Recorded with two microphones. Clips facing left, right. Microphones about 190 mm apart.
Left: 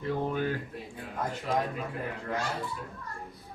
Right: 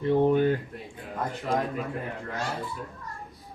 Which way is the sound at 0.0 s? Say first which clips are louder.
Right 9 dB; 25° right (ahead or behind).